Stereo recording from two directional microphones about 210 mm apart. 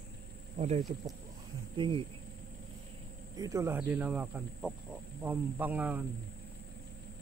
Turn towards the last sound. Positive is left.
turn(degrees=-10)  # may be behind; listen again after turning